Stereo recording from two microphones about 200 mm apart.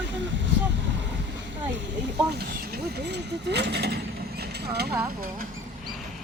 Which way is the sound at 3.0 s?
60° right (ahead or behind).